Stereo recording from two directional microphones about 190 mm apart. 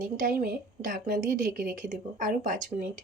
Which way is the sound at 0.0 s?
45° right (ahead or behind).